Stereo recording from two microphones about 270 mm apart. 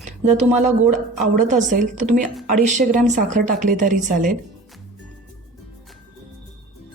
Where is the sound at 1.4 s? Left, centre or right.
Right.